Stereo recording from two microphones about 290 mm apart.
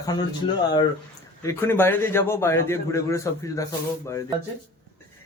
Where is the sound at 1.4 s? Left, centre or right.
Centre.